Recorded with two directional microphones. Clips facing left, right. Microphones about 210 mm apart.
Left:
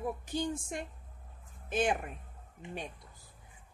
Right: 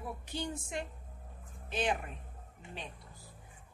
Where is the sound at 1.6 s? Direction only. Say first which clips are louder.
Left 3 dB; 50° left (ahead or behind).